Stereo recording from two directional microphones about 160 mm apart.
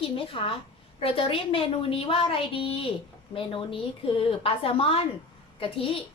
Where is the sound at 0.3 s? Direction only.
35° left (ahead or behind).